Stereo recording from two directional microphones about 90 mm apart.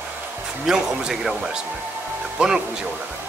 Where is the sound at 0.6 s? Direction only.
5° right (ahead or behind).